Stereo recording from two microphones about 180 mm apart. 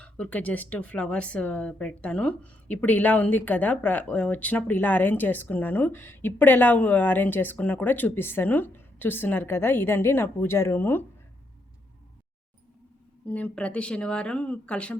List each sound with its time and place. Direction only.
0.0 s speech: 5° left (ahead or behind)
13.2 s speech: 10° left (ahead or behind)